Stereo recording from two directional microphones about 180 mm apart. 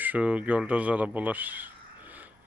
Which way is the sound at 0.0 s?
10° right (ahead or behind).